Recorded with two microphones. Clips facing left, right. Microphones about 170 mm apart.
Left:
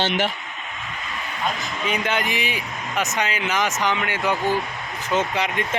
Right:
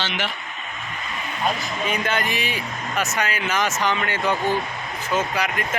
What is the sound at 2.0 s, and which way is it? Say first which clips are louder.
Speech: even; 15° left (ahead or behind).